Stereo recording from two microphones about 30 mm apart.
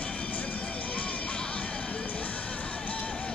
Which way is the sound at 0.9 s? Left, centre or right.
Left.